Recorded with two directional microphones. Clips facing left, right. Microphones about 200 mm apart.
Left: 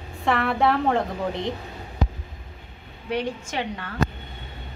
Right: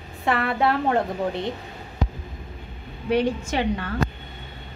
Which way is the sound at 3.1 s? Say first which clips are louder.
Right 5 dB; 35° right (ahead or behind).